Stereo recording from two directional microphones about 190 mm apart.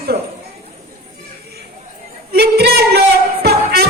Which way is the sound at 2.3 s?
60° right (ahead or behind).